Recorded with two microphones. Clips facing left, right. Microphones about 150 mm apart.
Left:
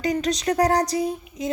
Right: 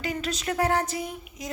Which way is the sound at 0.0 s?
35° left (ahead or behind).